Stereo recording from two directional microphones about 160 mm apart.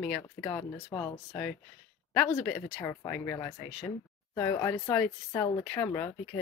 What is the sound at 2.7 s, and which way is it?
Speech, 15° left (ahead or behind).